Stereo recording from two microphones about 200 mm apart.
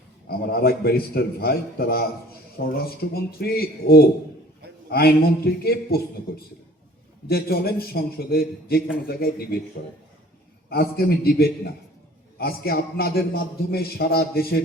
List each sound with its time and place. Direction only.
0.3 s a man's voice: 50° left (ahead or behind)
7.3 s a man's voice: 50° left (ahead or behind)
10.7 s a man's voice: 50° left (ahead or behind)